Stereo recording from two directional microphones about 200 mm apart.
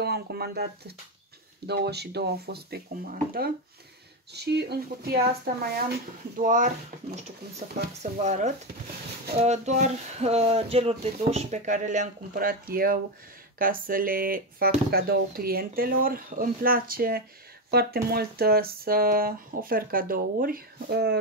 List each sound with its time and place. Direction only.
0.0 s speech: 55° right (ahead or behind)
6.4 s speech: 40° right (ahead or behind)
8.0 s speech: 35° right (ahead or behind); by 21.2 s 55° right (ahead or behind)